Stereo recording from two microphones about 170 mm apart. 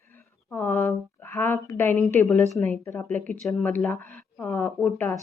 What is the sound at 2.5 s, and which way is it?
Speech, 10° left (ahead or behind).